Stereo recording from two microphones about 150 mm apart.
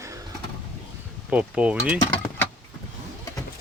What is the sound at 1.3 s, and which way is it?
Speech, 10° right (ahead or behind).